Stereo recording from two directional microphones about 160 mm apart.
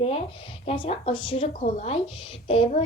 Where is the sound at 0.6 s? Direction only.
40° left (ahead or behind).